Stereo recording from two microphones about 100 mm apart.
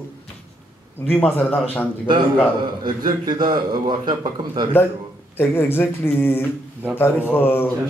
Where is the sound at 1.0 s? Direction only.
15° left (ahead or behind).